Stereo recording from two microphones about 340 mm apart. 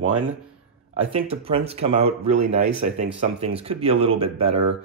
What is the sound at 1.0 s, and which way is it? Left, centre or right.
Speech, centre.